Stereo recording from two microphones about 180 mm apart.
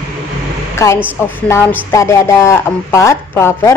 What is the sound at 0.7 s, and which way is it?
A woman's voice, 15° left (ahead or behind).